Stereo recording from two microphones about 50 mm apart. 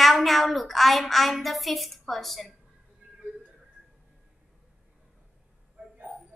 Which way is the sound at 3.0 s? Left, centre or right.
Right.